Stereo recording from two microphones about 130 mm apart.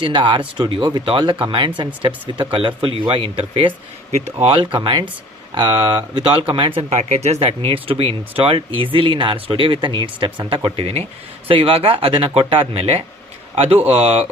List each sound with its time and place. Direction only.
0.0 s speech: 40° right (ahead or behind)
7.1 s speech: 60° right (ahead or behind)